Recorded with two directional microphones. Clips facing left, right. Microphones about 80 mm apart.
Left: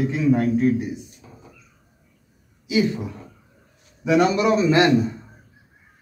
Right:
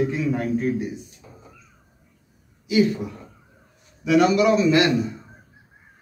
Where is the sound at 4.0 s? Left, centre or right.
Left.